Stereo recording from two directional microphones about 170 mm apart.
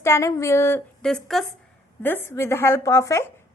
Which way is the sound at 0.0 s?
15° left (ahead or behind).